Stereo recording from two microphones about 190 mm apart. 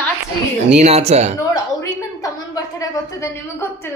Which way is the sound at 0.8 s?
35° right (ahead or behind).